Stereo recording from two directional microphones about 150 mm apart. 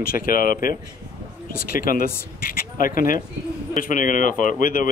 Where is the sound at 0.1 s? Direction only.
70° left (ahead or behind).